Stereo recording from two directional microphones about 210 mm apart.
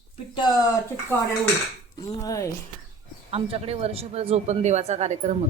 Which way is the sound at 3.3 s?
30° right (ahead or behind).